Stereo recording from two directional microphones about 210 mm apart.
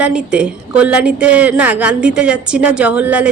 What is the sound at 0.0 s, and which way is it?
A woman's voice, 5° right (ahead or behind).